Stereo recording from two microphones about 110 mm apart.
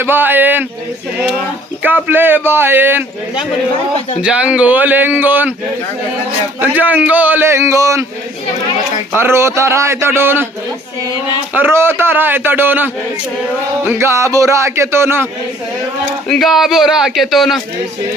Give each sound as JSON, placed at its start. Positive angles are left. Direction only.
{"t": 0.0, "sound": "a man's voice", "side_deg": -20}
{"t": 2.0, "sound": "speech", "side_deg": -20}
{"t": 4.2, "sound": "a man's voice", "side_deg": -10}
{"t": 6.6, "sound": "a man's voice", "side_deg": -15}
{"t": 9.1, "sound": "speech", "side_deg": -25}
{"t": 11.5, "sound": "speech", "side_deg": -20}
{"t": 16.3, "sound": "speech", "side_deg": 0}